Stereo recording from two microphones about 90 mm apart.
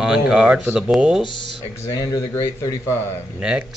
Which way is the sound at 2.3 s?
30° left (ahead or behind).